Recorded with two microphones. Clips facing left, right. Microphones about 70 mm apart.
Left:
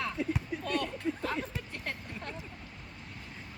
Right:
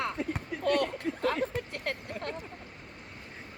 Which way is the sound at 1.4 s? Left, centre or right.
Right.